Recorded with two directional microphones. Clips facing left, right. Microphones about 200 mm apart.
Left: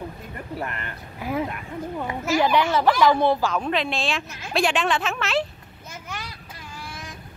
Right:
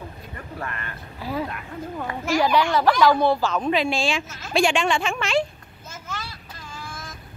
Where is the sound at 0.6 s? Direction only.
20° left (ahead or behind).